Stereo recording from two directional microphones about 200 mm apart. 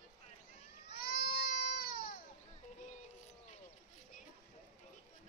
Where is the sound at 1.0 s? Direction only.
50° left (ahead or behind).